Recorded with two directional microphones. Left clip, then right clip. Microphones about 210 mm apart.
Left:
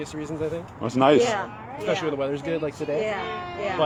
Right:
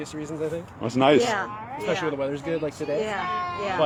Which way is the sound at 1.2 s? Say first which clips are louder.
Even; 45° right (ahead or behind).